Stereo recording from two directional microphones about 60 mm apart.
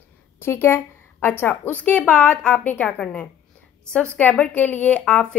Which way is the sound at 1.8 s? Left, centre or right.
Left.